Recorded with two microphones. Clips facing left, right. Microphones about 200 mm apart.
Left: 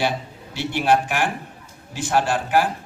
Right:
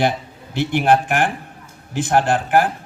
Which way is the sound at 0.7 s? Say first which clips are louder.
Right 3 dB; 55° right (ahead or behind).